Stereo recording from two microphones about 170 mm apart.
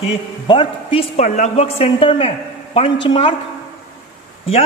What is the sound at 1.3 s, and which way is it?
A man's voice, 45° left (ahead or behind).